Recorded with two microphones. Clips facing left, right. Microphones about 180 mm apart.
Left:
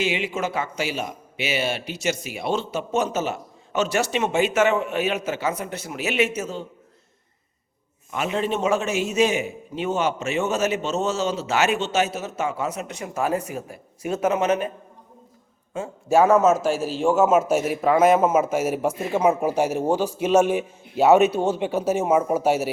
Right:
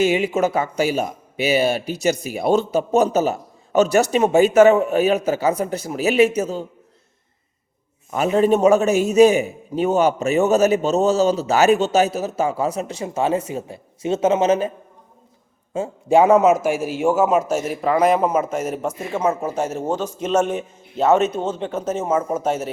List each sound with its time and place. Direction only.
0.0 s speech: 45° right (ahead or behind)
8.1 s speech: 40° right (ahead or behind)
16.0 s a man's voice: 15° right (ahead or behind)
17.2 s a man's voice: centre (ahead or behind)